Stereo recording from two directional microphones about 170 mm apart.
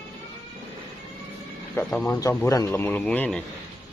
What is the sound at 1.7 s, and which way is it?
Speech, 5° left (ahead or behind).